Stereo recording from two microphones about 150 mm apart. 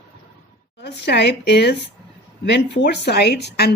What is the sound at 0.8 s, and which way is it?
Speech, 90° left.